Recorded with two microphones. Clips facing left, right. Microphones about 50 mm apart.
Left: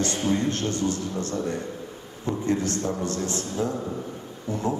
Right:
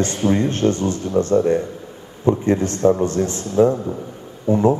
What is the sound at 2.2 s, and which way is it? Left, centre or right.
Speech, right.